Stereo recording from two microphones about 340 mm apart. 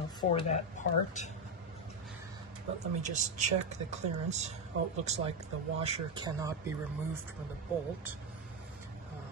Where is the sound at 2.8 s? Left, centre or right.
Right.